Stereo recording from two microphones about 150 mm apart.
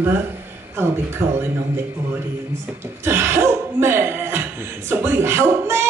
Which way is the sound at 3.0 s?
15° right (ahead or behind).